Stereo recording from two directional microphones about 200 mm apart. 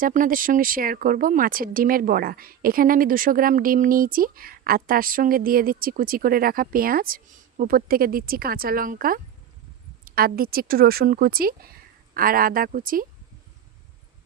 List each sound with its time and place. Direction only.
0.0 s speech: 45° right (ahead or behind)